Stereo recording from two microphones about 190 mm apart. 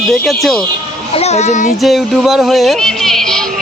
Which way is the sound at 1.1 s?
35° left (ahead or behind).